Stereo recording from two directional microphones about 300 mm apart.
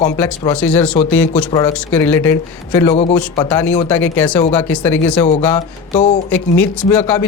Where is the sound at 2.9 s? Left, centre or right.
Left; by 5.1 s centre.